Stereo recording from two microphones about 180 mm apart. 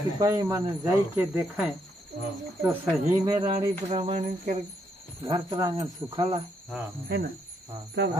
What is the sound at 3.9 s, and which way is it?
Speech, 35° right (ahead or behind).